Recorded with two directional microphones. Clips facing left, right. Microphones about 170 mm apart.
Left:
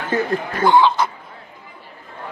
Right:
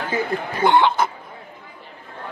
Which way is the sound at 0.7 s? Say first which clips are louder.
Left 2 dB; 60° right (ahead or behind).